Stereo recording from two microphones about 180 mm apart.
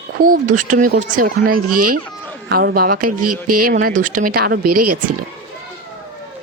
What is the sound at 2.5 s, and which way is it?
Speech, 55° right (ahead or behind).